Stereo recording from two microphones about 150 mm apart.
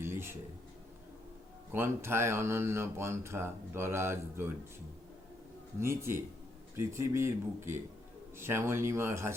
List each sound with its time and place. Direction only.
0.0 s a sound: 15° right (ahead or behind)
1.7 s speech: 15° right (ahead or behind)
5.8 s speech: 15° right (ahead or behind)